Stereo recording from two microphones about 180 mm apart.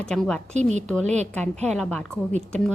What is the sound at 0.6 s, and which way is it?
Speech, 40° right (ahead or behind).